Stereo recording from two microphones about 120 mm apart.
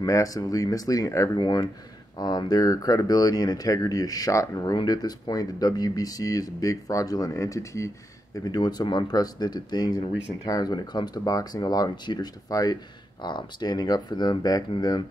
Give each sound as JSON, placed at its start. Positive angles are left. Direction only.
{"t": 0.0, "sound": "speech", "side_deg": 30}